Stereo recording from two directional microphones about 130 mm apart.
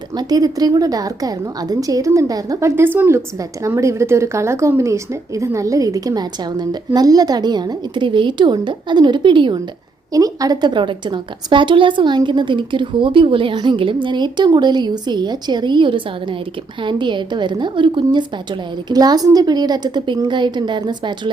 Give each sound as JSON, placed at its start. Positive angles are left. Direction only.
{"t": 0.2, "sound": "a woman's voice", "side_deg": -30}
{"t": 10.1, "sound": "a woman's voice", "side_deg": -30}